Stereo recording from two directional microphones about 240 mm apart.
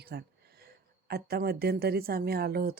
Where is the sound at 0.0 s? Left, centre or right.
Right.